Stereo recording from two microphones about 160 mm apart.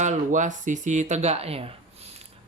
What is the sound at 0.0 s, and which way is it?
Speech, 50° right (ahead or behind).